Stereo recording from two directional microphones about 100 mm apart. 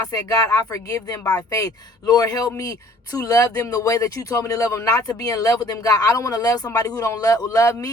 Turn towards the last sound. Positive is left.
turn(degrees=35)  # may be behind; listen again after turning